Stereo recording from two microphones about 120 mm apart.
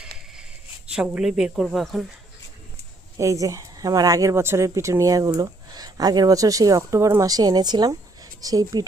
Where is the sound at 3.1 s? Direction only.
25° right (ahead or behind).